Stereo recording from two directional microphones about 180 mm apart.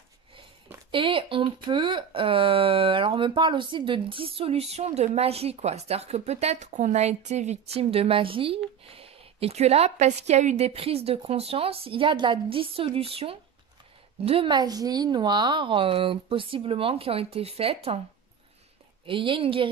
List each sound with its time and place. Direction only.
0.9 s speech: 30° right (ahead or behind)
19.0 s speech: 30° right (ahead or behind)